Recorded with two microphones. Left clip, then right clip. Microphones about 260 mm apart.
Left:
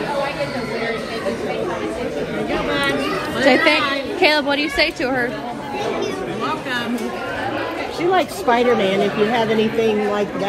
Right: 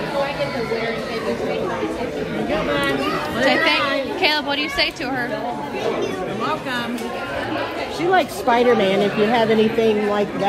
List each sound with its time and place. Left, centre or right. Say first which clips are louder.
3.3 s a woman's voice: left 3 dB; centre
8.1 s speech: even; right